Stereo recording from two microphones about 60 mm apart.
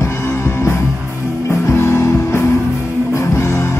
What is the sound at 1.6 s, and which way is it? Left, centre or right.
Music, left.